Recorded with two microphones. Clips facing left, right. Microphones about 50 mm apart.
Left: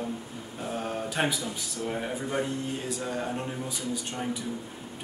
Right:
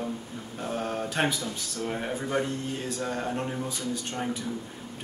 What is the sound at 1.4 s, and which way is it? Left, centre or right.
Speech, left.